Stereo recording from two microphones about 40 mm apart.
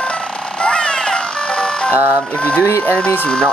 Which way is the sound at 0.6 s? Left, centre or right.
Left.